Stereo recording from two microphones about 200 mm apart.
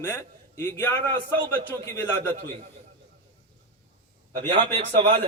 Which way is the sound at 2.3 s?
30° right (ahead or behind).